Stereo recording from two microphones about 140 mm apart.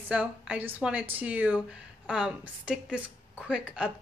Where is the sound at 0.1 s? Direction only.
10° right (ahead or behind).